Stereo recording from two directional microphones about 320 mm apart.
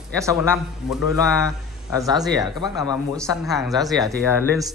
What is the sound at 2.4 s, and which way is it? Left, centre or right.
Speech, centre.